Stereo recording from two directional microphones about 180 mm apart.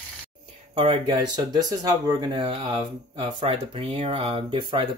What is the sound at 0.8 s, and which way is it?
Speech, 30° right (ahead or behind).